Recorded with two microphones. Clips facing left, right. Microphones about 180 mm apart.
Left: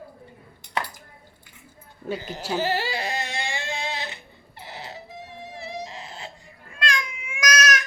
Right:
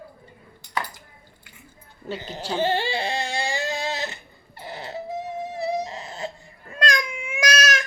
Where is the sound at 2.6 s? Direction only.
25° right (ahead or behind); by 4.1 s 40° right (ahead or behind).